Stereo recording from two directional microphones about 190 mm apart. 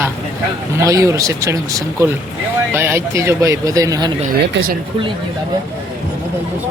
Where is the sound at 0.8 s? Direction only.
15° right (ahead or behind).